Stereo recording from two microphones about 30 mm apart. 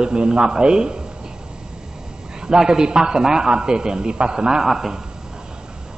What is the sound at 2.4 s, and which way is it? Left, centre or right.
A man's voice, right.